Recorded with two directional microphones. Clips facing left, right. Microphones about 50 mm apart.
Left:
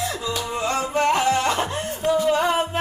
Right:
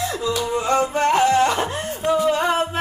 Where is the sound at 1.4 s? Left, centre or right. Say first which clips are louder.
Right 4 dB; right.